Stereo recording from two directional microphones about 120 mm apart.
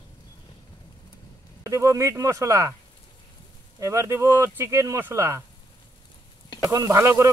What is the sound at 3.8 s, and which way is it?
Speech, 25° right (ahead or behind).